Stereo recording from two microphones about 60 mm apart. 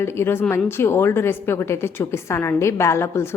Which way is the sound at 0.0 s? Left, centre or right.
Left.